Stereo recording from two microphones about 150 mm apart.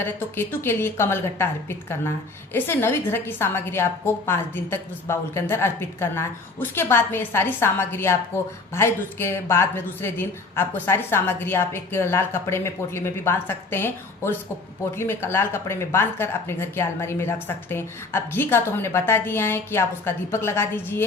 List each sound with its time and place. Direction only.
0.0 s a woman's voice: 15° left (ahead or behind)